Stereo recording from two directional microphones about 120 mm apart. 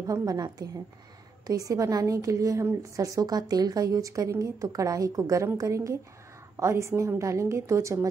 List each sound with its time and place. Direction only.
0.0 s a woman's voice: 30° right (ahead or behind)